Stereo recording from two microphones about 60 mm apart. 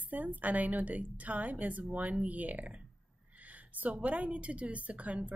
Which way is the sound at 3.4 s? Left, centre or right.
Right.